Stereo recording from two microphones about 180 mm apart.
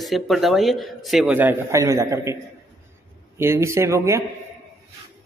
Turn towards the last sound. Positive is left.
turn(degrees=-15)  # may be behind; listen again after turning